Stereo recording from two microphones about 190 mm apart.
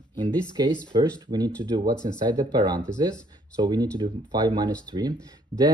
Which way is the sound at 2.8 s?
5° left (ahead or behind).